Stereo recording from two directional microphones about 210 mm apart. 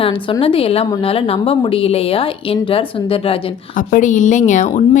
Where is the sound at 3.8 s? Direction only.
40° left (ahead or behind).